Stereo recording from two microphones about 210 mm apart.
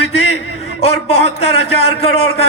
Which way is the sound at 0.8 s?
30° left (ahead or behind).